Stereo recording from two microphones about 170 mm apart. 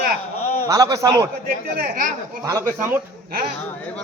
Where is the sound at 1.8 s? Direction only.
55° right (ahead or behind).